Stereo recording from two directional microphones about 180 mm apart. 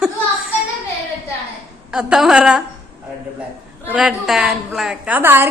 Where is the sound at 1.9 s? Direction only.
5° right (ahead or behind).